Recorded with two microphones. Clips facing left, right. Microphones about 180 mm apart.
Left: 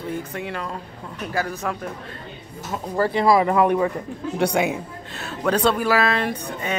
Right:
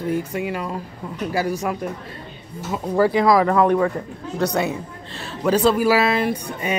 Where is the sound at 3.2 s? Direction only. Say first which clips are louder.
Right 1 dB; 10° left (ahead or behind).